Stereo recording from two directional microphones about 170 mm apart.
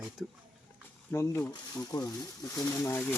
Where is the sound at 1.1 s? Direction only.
15° left (ahead or behind).